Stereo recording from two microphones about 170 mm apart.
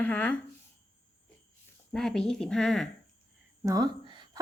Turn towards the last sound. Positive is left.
turn(degrees=-25)  # may be behind; listen again after turning